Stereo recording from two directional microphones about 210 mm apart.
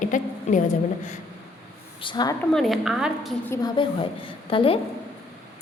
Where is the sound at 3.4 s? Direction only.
20° left (ahead or behind).